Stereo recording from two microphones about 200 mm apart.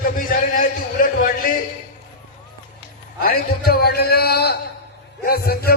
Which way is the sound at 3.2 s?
50° left (ahead or behind).